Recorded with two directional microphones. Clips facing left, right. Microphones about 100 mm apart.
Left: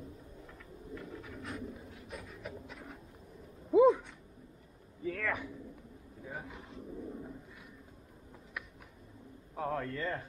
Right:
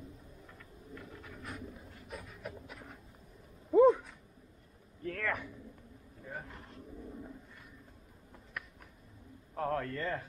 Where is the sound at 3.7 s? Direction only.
Centre (ahead or behind).